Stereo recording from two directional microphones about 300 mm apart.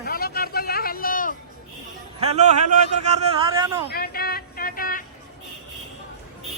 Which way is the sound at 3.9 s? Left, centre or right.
Left.